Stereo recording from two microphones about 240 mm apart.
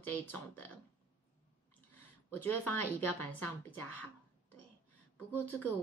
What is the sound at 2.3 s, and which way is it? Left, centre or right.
A woman's voice, centre.